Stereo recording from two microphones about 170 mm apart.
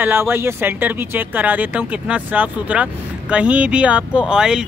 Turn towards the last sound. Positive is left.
turn(degrees=-5)  # may be behind; listen again after turning